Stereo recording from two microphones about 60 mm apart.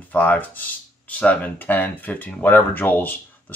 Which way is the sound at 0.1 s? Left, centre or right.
Left.